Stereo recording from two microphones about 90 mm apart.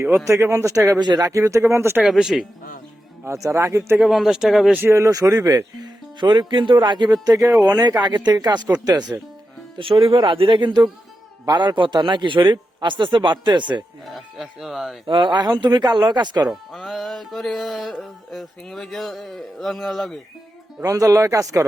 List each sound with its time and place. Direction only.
0.3 s speech: 35° right (ahead or behind)
0.9 s speech: 55° right (ahead or behind)
1.3 s speech: 35° right (ahead or behind)
2.0 s music: 5° right (ahead or behind)
3.2 s speech: 35° right (ahead or behind)
3.9 s music: centre (ahead or behind)
4.7 s speech: 25° right (ahead or behind)
6.1 s a man's voice: 55° right (ahead or behind)
9.7 s a man's voice: 75° right (ahead or behind); by 13.8 s 60° right (ahead or behind)
14.1 s music: centre (ahead or behind)
15.0 s a man's voice: 60° right (ahead or behind)
16.5 s music: centre (ahead or behind)
20.8 s speech: 40° right (ahead or behind)